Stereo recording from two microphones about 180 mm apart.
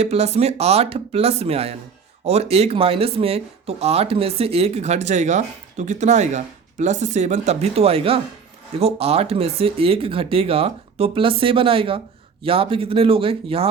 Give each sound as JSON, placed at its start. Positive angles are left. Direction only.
{"t": 0.0, "sound": "speech", "side_deg": -35}